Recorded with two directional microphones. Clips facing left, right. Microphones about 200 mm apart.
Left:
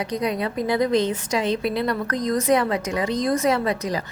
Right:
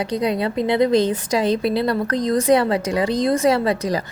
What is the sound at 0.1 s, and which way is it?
A woman's voice, 30° right (ahead or behind).